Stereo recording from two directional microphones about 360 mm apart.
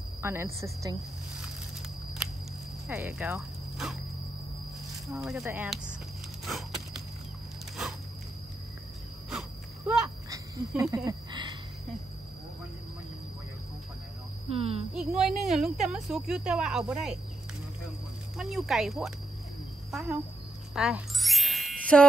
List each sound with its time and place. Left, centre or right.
0.2 s a woman's voice: centre
2.9 s speech: centre
5.0 s a woman's voice: centre
9.3 s a sound: centre
14.5 s a woman's voice: centre
15.0 s a woman's voice: centre
18.4 s a woman's voice: centre
20.7 s music: centre